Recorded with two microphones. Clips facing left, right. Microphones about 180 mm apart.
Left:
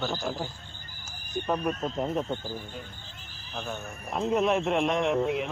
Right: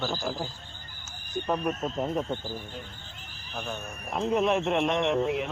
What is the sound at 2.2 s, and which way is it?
Speech, 15° right (ahead or behind).